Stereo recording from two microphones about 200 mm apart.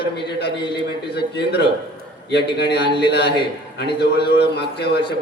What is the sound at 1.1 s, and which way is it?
A man's voice, 55° left (ahead or behind).